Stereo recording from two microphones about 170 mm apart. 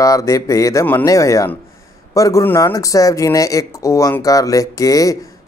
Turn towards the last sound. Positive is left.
turn(degrees=20)  # may be behind; listen again after turning